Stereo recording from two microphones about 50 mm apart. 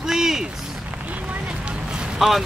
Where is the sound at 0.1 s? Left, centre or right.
Centre.